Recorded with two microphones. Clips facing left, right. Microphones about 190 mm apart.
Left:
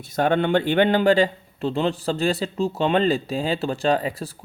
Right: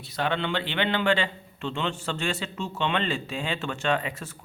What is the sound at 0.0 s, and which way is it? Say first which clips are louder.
A man's voice: left 8 dB; 45° left (ahead or behind).